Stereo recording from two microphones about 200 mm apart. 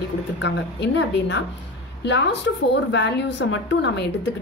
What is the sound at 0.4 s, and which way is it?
A woman's voice, 60° left (ahead or behind).